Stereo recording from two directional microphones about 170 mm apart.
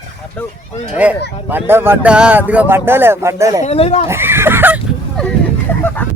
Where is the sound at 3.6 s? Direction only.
35° left (ahead or behind).